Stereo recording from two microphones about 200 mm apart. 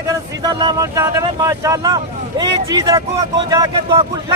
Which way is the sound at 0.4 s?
20° right (ahead or behind).